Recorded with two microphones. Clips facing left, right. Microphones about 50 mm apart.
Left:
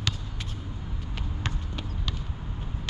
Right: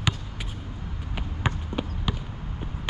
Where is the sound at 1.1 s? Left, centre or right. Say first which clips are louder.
Right 6 dB; centre.